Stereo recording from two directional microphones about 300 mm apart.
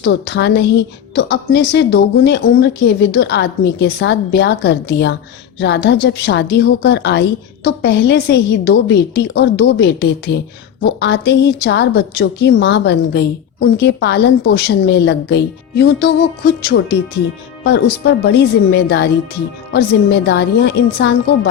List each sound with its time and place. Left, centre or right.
0.0 s a woman's voice: left